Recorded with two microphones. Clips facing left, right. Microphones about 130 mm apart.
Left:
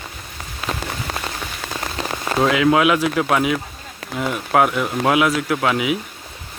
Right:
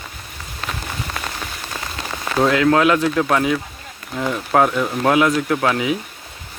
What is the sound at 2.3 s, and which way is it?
Speech, 5° left (ahead or behind).